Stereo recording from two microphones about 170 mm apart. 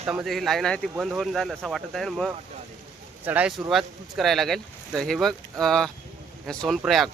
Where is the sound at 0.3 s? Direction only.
Centre (ahead or behind).